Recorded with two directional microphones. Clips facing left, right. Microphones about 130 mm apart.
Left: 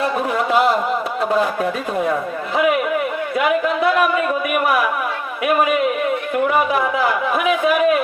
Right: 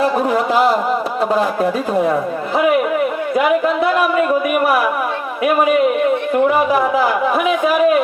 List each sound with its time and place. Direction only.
0.0 s a man's voice: 30° right (ahead or behind)
4.6 s a man's voice: 30° right (ahead or behind)
6.3 s a man's voice: 30° right (ahead or behind)